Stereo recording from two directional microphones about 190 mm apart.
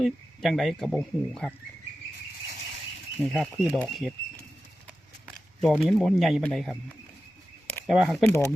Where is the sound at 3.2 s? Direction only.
Centre (ahead or behind).